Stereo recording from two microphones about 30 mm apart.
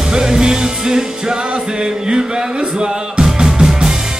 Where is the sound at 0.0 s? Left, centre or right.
Right.